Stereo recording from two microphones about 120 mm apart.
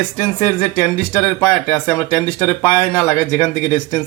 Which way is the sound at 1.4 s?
15° left (ahead or behind).